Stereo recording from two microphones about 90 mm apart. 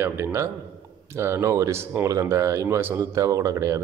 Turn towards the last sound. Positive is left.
turn(degrees=-40)  # may be behind; listen again after turning